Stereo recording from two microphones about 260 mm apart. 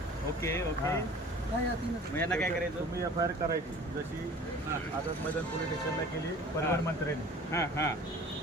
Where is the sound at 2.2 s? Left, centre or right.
Centre.